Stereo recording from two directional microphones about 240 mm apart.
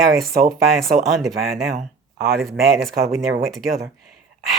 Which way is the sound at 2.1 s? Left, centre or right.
Right.